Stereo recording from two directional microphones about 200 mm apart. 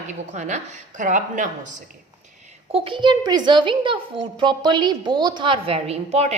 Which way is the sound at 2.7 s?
25° right (ahead or behind).